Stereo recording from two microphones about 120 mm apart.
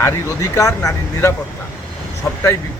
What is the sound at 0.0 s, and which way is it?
Speech, 25° left (ahead or behind).